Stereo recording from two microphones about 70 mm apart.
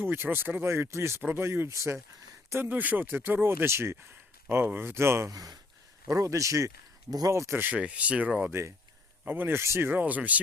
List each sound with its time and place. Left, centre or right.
0.0 s speech: right
2.5 s speech: right
5.3 s speech: right
7.1 s speech: right
7.5 s speech: right
8.4 s speech: right
9.2 s speech: right